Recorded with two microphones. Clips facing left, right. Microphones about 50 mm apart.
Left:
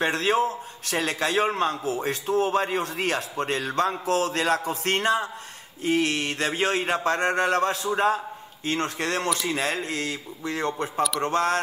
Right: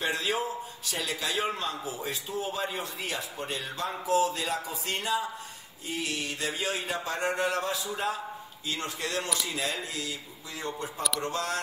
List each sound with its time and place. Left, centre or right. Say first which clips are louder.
0.0 s a man's voice: left 7 dB; left